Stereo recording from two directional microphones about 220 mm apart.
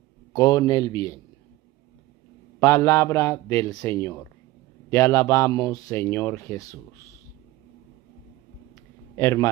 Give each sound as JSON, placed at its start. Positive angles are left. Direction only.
{"t": 0.3, "sound": "speech", "side_deg": 15}
{"t": 2.6, "sound": "speech", "side_deg": 15}
{"t": 9.1, "sound": "a man's voice", "side_deg": 10}